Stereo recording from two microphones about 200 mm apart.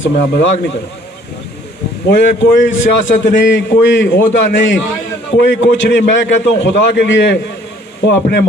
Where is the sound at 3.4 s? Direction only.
60° left (ahead or behind).